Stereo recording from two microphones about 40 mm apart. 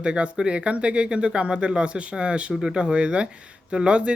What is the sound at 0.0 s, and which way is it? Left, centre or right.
Speech, right.